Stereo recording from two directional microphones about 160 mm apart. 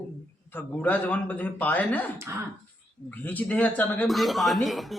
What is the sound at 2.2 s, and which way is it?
Speech, 15° right (ahead or behind).